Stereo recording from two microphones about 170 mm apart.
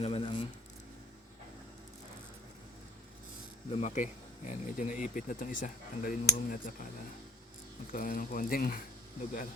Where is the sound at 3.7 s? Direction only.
40° left (ahead or behind).